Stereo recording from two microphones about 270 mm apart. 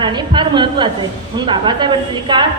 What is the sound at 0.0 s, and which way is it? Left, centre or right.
A woman's voice, centre.